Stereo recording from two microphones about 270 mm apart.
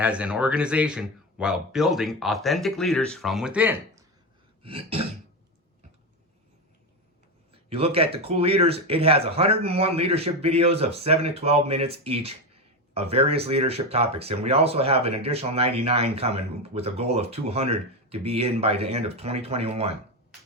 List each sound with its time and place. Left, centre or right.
0.0 s speech: centre
4.6 s speech: right
7.5 s speech: right